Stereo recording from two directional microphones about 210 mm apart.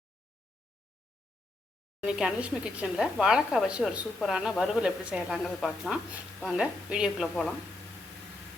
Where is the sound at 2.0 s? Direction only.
5° right (ahead or behind).